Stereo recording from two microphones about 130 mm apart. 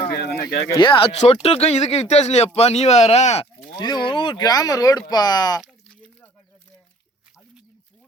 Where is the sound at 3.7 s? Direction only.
35° left (ahead or behind).